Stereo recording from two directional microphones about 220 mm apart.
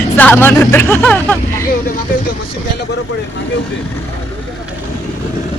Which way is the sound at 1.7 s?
40° left (ahead or behind).